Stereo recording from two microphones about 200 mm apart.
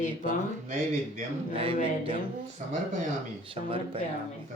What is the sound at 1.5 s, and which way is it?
Speech, 25° right (ahead or behind).